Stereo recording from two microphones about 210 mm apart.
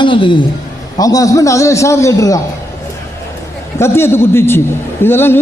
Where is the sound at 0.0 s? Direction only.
25° left (ahead or behind).